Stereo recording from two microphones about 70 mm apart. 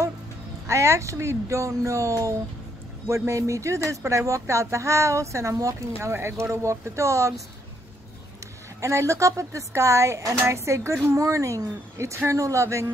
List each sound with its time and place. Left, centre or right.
0.7 s speech: right
8.8 s speech: right